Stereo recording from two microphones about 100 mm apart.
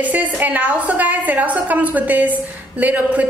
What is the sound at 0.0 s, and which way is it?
A woman's voice, 15° right (ahead or behind).